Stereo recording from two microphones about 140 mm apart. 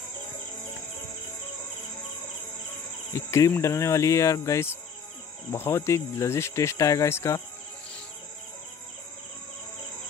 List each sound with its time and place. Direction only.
3.1 s speech: 20° left (ahead or behind)